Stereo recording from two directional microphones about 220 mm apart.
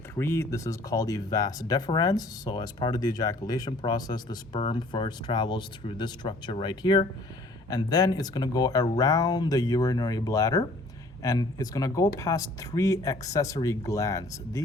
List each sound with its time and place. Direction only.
0.2 s speech: 10° left (ahead or behind)